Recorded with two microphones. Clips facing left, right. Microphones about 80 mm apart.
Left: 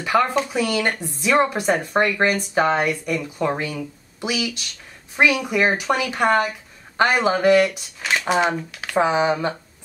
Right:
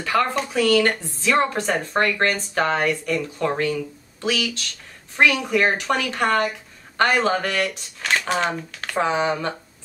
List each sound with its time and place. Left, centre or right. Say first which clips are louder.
0.0 s speech: left 2 dB; centre